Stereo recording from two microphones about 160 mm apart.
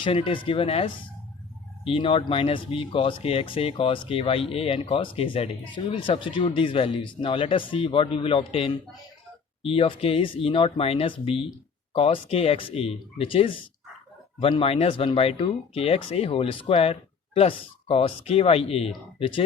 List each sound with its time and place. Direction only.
0.0 s speech: 35° left (ahead or behind)